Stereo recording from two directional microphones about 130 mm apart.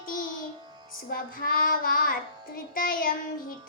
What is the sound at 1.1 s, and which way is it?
Child singing, 90° left.